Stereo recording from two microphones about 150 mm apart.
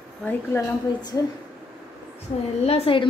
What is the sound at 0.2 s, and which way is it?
Speech, 15° left (ahead or behind).